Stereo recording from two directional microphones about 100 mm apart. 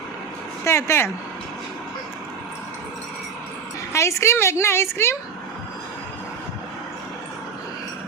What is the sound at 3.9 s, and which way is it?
A woman's voice, 30° left (ahead or behind).